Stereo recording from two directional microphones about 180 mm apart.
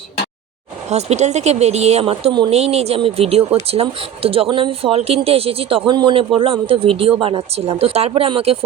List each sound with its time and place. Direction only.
0.9 s speech: 40° right (ahead or behind)